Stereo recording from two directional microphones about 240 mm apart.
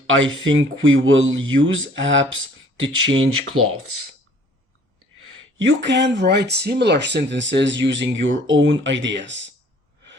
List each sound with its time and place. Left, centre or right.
0.4 s speech: right
5.5 s speech: right